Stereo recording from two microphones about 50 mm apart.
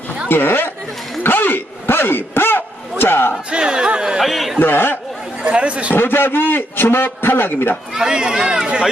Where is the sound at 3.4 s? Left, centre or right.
Centre.